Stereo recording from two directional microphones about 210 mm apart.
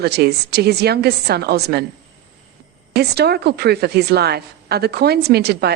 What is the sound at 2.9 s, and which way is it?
A woman's voice, 50° right (ahead or behind).